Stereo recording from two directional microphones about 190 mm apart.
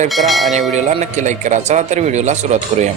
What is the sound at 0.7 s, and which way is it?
A man's voice, 40° right (ahead or behind).